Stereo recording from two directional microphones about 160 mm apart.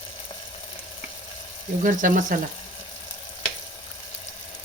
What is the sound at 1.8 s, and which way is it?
Speech, 55° right (ahead or behind).